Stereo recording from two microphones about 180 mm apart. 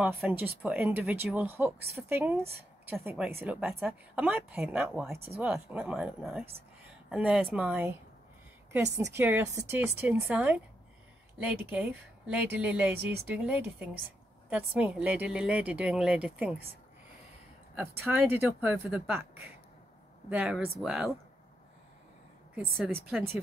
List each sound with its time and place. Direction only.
0.0 s a woman's voice: 5° right (ahead or behind)
6.9 s a sound: 5° right (ahead or behind)
7.5 s speech: 10° right (ahead or behind)
9.1 s a woman's voice: 15° right (ahead or behind)
17.7 s a woman's voice: 10° right (ahead or behind)